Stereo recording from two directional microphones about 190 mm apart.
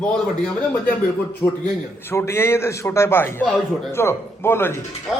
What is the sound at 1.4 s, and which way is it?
A man's voice, 10° left (ahead or behind).